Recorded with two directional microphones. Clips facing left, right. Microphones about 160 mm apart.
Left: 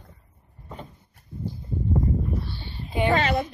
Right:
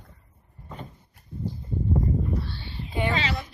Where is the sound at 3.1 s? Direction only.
50° left (ahead or behind).